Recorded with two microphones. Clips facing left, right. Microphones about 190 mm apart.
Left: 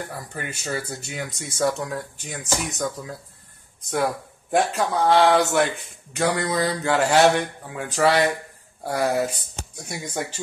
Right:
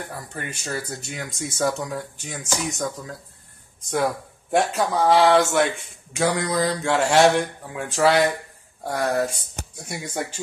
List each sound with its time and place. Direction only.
0.3 s speech: 5° left (ahead or behind)